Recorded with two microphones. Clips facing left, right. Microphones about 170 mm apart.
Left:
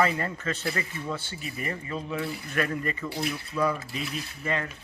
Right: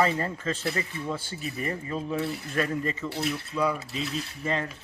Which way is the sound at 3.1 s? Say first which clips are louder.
Right 1 dB; centre (ahead or behind).